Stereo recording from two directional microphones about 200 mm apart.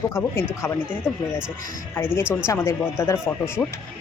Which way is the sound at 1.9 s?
10° left (ahead or behind).